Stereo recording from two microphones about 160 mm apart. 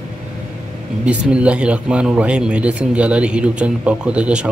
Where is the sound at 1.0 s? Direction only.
5° right (ahead or behind).